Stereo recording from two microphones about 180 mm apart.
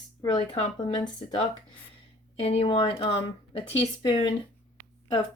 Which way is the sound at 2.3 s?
30° left (ahead or behind).